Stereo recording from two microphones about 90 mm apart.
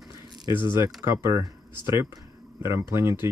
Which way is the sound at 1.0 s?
30° right (ahead or behind).